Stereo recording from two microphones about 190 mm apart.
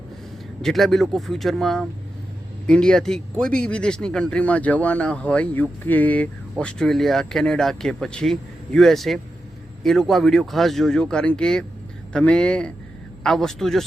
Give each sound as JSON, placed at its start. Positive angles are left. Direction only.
{"t": 0.6, "sound": "speech", "side_deg": 0}